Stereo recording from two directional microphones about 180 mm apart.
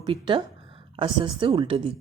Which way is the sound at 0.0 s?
25° right (ahead or behind).